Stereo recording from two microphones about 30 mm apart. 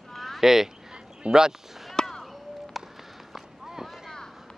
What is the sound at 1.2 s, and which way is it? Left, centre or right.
Speech, right.